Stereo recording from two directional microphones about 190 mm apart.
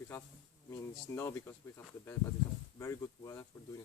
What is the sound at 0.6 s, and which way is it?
Speech, 15° left (ahead or behind).